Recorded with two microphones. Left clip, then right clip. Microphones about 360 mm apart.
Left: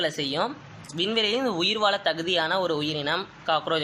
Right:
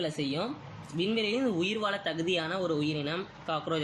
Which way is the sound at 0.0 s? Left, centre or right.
Centre.